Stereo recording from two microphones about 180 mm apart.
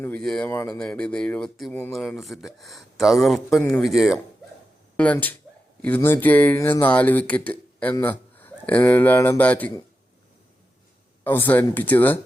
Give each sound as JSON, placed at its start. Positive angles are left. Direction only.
{"t": 0.0, "sound": "speech", "side_deg": 5}
{"t": 11.2, "sound": "speech", "side_deg": 10}